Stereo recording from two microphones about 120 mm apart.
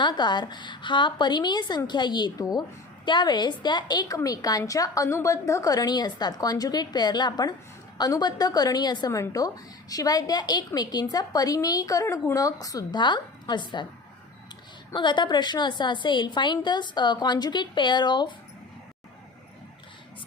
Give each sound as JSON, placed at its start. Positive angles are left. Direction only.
{"t": 0.0, "sound": "a woman's voice", "side_deg": 40}
{"t": 14.9, "sound": "a woman's voice", "side_deg": 40}